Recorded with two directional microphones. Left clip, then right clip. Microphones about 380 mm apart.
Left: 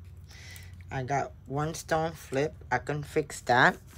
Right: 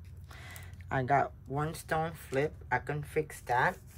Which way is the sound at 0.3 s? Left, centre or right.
Centre.